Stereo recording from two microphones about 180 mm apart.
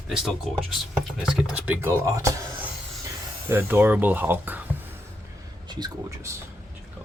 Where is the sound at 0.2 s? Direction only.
Centre (ahead or behind).